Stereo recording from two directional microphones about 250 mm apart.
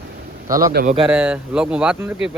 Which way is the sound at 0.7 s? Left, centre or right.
Right.